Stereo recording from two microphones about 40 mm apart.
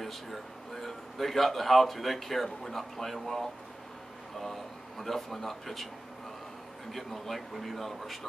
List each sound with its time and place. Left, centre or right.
0.0 s speech: centre
6.9 s speech: centre